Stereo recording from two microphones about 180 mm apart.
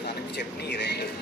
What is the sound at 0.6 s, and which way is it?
Speech, 65° left (ahead or behind).